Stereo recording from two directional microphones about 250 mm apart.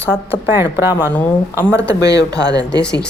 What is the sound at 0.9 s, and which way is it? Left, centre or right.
Speech, centre.